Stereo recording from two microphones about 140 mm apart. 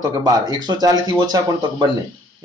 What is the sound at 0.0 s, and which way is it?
Speech, 30° right (ahead or behind).